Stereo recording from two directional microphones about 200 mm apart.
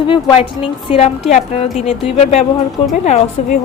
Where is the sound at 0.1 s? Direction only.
25° left (ahead or behind).